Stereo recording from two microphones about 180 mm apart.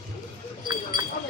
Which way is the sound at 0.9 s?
25° right (ahead or behind).